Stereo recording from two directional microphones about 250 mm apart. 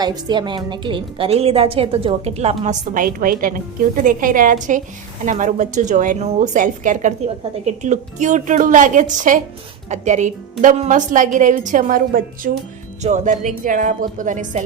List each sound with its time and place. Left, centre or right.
0.0 s a woman's voice: centre